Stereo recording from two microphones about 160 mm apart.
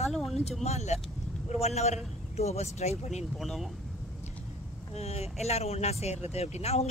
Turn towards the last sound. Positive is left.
turn(degrees=40)  # may be behind; listen again after turning